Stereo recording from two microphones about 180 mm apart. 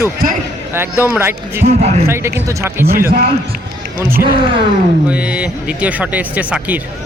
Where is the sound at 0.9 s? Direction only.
15° left (ahead or behind).